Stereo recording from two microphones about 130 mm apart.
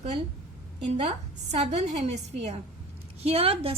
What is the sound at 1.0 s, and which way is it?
A woman's voice, 55° right (ahead or behind).